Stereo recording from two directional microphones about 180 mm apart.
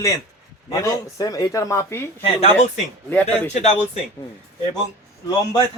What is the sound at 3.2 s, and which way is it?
Speech, 40° left (ahead or behind).